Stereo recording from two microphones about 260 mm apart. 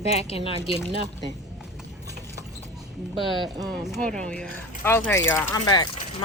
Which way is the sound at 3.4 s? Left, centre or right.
Centre.